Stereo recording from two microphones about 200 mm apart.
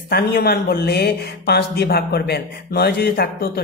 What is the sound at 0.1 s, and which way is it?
Speech, 50° left (ahead or behind).